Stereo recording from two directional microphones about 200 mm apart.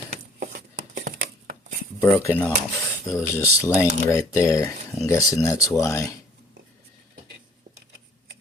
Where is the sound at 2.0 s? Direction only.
15° left (ahead or behind).